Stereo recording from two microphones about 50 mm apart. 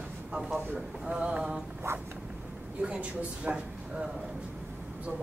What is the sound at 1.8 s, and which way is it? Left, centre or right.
Zipper, right.